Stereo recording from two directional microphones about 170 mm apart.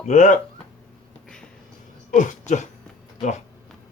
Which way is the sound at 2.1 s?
45° left (ahead or behind).